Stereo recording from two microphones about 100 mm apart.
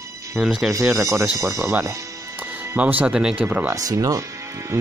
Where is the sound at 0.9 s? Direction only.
30° right (ahead or behind).